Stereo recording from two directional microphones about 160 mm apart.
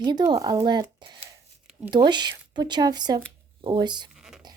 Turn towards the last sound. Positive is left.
turn(degrees=0)  # may be behind; listen again after turning